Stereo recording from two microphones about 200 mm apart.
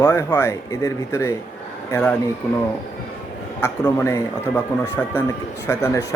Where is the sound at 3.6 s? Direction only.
15° left (ahead or behind).